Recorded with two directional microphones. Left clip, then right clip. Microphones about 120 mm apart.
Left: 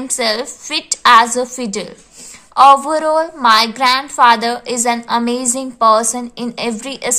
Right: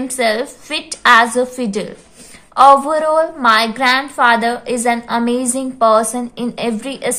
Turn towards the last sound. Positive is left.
turn(degrees=35)  # may be behind; listen again after turning